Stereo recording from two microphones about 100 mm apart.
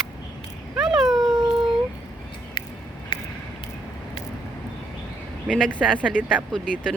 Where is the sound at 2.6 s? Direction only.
55° left (ahead or behind).